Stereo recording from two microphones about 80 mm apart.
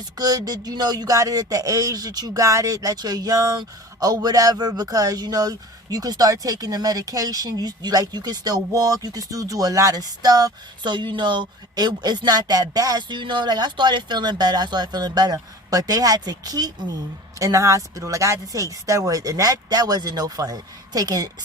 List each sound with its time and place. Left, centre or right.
0.2 s speech: right
13.0 s speech: right
17.4 s speech: right